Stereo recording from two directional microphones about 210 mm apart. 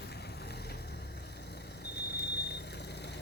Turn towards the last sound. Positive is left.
turn(degrees=55)  # may be behind; listen again after turning